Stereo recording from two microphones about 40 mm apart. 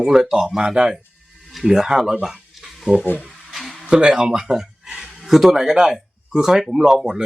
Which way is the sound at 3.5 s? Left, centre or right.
Centre.